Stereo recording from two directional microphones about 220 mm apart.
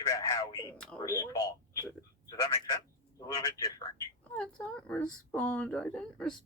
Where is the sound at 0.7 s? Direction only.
5° left (ahead or behind).